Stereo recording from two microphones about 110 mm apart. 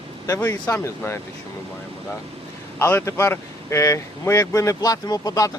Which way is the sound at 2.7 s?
20° left (ahead or behind).